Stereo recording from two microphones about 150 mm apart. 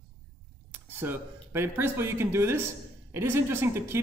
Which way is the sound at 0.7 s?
15° right (ahead or behind).